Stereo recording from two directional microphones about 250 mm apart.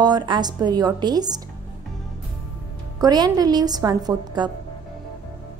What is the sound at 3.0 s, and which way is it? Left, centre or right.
A woman's voice, centre.